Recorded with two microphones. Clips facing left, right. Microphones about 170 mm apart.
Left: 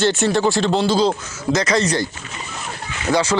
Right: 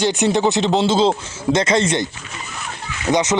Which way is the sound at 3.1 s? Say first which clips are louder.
Right 1 dB; 20° right (ahead or behind).